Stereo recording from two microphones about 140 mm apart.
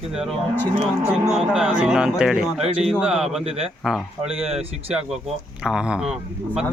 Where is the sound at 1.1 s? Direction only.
5° right (ahead or behind).